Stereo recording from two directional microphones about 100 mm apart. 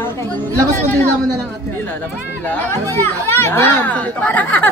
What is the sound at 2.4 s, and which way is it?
Speech, 20° left (ahead or behind).